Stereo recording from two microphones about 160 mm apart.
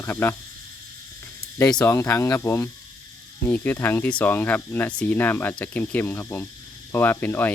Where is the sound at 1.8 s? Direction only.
15° left (ahead or behind).